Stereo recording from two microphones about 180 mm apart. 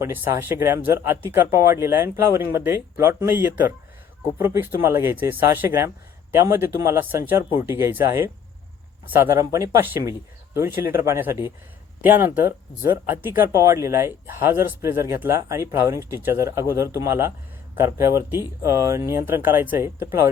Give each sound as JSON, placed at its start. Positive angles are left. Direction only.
{"t": 0.0, "sound": "speech", "side_deg": -10}
{"t": 9.0, "sound": "speech", "side_deg": -15}